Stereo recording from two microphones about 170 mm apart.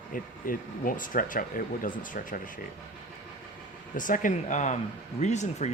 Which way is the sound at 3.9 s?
50° left (ahead or behind).